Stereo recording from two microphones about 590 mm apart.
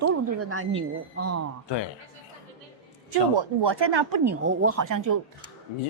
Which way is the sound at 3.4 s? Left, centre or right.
Right.